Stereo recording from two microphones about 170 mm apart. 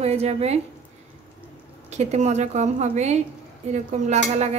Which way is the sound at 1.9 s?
40° right (ahead or behind).